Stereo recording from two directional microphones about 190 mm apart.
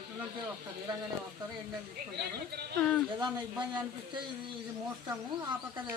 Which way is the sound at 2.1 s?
60° right (ahead or behind).